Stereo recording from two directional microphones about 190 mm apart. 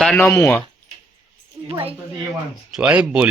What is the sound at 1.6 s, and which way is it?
Speech, 25° right (ahead or behind).